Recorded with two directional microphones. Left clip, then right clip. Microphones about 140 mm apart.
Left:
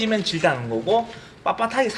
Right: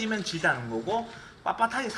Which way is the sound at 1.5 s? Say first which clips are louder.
Left 5 dB; 90° left.